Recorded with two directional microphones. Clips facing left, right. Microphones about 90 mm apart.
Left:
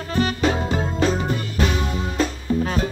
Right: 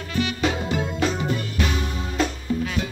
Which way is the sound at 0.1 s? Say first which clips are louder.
Left 3 dB; 35° left (ahead or behind).